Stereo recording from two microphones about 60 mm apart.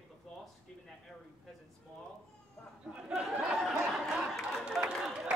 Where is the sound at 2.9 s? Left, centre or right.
Centre.